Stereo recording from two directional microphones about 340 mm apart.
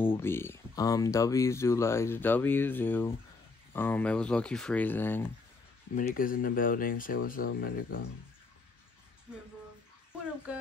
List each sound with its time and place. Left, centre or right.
0.0 s speech: centre
5.9 s speech: left
10.5 s speech: centre